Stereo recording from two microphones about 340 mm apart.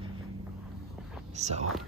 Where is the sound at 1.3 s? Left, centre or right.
Centre.